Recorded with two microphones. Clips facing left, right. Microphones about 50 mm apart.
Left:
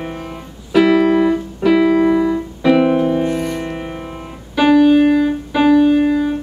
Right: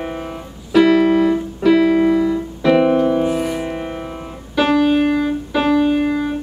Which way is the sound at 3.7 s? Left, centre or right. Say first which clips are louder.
Right 1 dB; centre.